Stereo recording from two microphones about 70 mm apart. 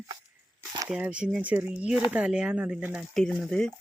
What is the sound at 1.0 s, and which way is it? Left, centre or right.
Speech, centre.